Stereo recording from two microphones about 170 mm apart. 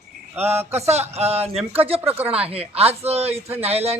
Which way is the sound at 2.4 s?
35° right (ahead or behind).